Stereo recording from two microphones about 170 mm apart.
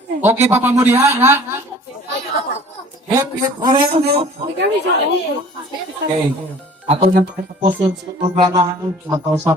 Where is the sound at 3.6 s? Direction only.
30° right (ahead or behind).